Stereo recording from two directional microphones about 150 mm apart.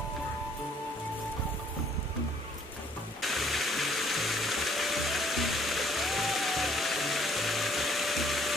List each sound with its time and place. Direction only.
3.2 s music: centre (ahead or behind)